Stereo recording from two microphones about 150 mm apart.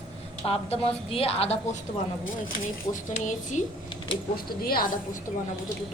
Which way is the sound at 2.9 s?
55° left (ahead or behind).